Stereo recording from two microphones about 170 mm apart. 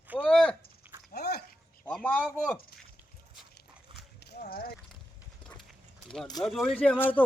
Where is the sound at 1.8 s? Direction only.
10° left (ahead or behind).